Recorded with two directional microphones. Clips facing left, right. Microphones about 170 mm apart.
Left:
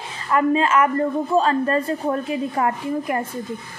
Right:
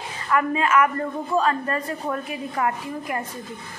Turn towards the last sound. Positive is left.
turn(degrees=30)  # may be behind; listen again after turning